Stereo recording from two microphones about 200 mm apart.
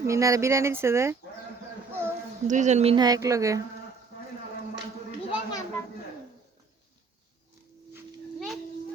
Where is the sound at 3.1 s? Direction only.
15° right (ahead or behind).